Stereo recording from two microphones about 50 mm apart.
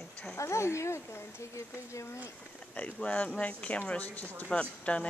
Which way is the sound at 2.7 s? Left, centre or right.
Left.